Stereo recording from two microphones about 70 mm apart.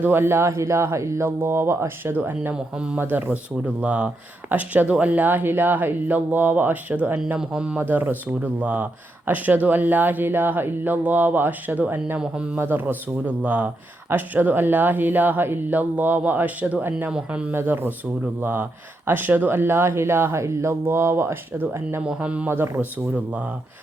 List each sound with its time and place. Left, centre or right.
0.0 s speech: right
2.1 s speech: right
2.7 s speech: centre
3.0 s speech: right
7.8 s speech: right
12.2 s speech: centre
12.5 s speech: right; by 17.5 s centre
17.5 s speech: right
22.0 s speech: centre
22.4 s speech: right
23.1 s speech: right